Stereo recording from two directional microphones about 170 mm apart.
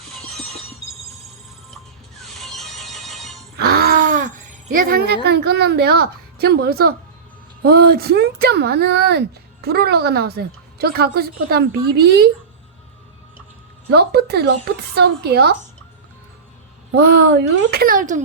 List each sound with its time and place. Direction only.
0.0 s train: centre (ahead or behind)
2.1 s neigh: centre (ahead or behind)
3.6 s groan: 70° right (ahead or behind)
4.7 s speech: 55° right (ahead or behind)
13.9 s speech: 70° right (ahead or behind)
16.9 s speech: 70° right (ahead or behind); by 18.2 s 50° right (ahead or behind)